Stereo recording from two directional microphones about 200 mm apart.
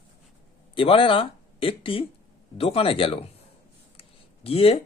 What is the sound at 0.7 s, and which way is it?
Speech, 25° left (ahead or behind).